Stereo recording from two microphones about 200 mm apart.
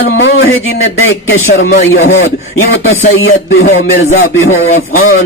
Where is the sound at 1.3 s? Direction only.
50° left (ahead or behind).